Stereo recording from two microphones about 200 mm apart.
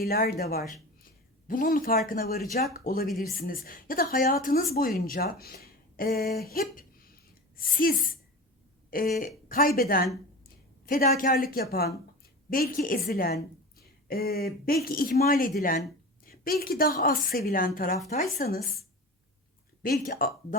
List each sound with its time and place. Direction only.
0.0 s a woman's voice: 50° left (ahead or behind)
1.5 s a woman's voice: 45° left (ahead or behind)
19.8 s a woman's voice: 45° left (ahead or behind)